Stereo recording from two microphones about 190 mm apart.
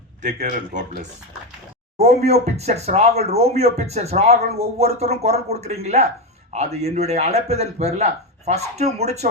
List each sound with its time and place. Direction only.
0.2 s speech: 45° right (ahead or behind)
2.2 s speech: 35° right (ahead or behind)